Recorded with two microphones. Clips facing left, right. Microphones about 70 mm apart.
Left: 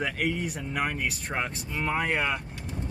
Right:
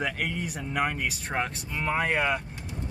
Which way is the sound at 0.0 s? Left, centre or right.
Centre.